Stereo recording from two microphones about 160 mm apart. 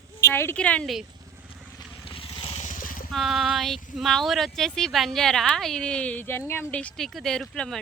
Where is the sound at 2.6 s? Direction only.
55° left (ahead or behind).